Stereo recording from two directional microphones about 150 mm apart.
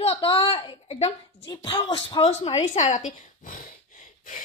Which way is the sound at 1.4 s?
30° left (ahead or behind).